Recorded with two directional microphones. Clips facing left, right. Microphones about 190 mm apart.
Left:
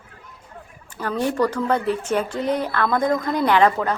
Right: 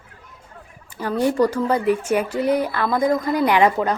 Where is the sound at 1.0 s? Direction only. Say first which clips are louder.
Right 3 dB; 10° right (ahead or behind).